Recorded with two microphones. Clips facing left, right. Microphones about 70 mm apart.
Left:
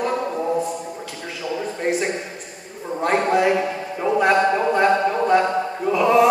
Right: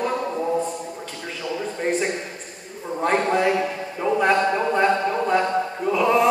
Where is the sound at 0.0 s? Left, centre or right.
Centre.